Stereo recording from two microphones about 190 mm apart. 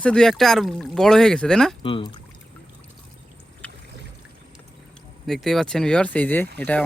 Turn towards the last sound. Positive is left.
turn(degrees=10)  # may be behind; listen again after turning